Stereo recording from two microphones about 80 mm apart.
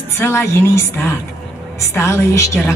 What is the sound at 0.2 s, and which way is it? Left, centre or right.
A woman's voice, left.